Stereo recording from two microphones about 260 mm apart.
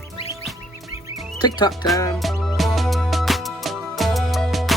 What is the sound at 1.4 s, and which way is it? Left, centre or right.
Speech, centre.